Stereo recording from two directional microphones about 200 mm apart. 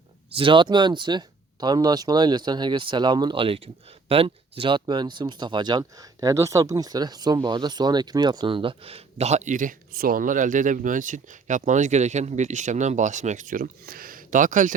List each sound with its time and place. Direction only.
0.3 s speech: 25° right (ahead or behind)